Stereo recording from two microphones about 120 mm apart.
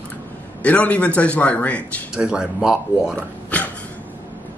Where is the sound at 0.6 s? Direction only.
10° left (ahead or behind).